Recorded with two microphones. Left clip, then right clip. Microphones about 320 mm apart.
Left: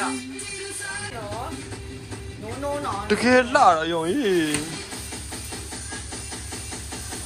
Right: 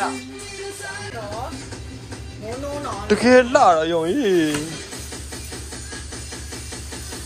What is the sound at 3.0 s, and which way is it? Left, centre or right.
Speech, centre.